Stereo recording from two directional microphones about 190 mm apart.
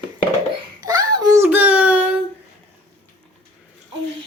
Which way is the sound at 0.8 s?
20° right (ahead or behind).